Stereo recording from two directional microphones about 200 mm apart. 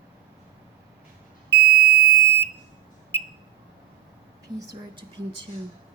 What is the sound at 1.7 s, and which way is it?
Beep, 35° left (ahead or behind).